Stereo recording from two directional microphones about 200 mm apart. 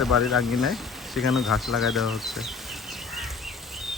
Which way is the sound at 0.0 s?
Centre (ahead or behind).